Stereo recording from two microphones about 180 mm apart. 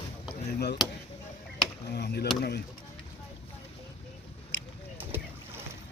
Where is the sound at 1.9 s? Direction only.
65° left (ahead or behind).